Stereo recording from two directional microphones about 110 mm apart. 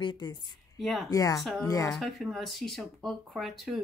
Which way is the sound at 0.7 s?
Centre (ahead or behind).